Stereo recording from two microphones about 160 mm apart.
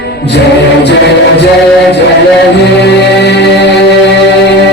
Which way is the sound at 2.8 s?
90° left.